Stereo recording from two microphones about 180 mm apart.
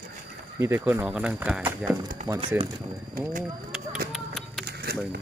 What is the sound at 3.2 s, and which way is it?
Speech, 50° right (ahead or behind).